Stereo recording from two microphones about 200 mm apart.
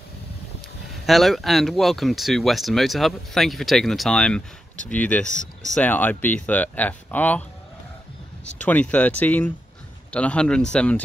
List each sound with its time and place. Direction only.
1.0 s speech: centre (ahead or behind)
8.6 s speech: 5° left (ahead or behind)